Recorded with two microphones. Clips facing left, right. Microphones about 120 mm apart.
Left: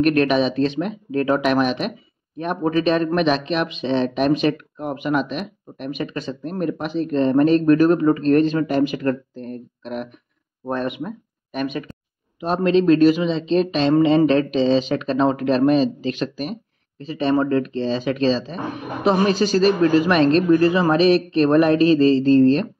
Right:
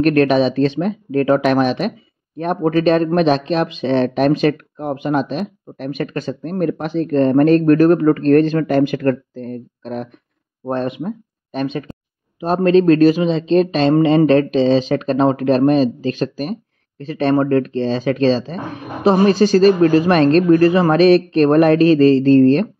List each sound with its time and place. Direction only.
0.0 s speech: 40° right (ahead or behind)
4.7 s speech: 30° right (ahead or behind); by 9.2 s 55° right (ahead or behind)
9.3 s speech: 40° right (ahead or behind)
12.4 s speech: 45° right (ahead or behind)
17.1 s speech: 55° right (ahead or behind)